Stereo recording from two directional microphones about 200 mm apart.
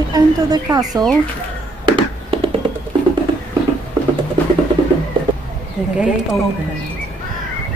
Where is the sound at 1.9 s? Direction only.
25° right (ahead or behind).